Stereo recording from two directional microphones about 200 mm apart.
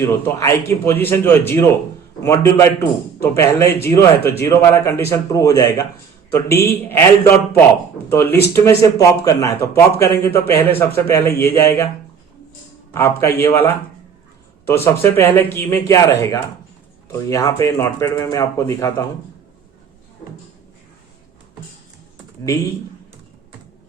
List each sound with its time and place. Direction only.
0.0 s speech: 15° left (ahead or behind)
12.9 s speech: 15° left (ahead or behind)